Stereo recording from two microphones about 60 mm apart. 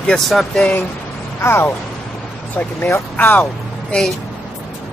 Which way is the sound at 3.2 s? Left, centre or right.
Left.